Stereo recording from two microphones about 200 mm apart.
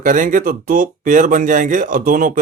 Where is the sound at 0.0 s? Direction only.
40° right (ahead or behind).